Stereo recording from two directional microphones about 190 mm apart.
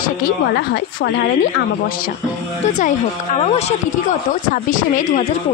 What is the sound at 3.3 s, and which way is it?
Speech, 35° left (ahead or behind).